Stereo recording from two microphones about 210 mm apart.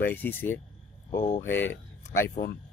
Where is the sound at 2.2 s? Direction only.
45° left (ahead or behind).